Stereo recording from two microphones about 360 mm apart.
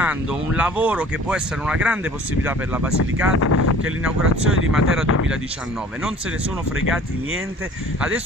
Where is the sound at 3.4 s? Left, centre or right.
Left.